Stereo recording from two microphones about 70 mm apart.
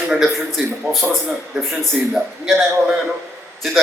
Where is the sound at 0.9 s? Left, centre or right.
Right.